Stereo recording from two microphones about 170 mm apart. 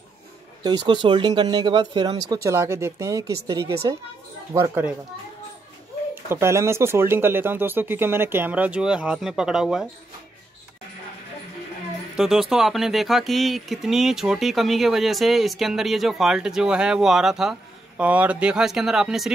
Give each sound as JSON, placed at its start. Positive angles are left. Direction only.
{"t": 0.7, "sound": "speech", "side_deg": -25}
{"t": 6.2, "sound": "speech", "side_deg": -15}
{"t": 12.2, "sound": "speech", "side_deg": 0}